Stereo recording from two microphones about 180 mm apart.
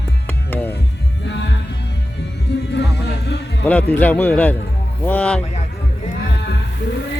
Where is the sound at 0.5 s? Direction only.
10° left (ahead or behind).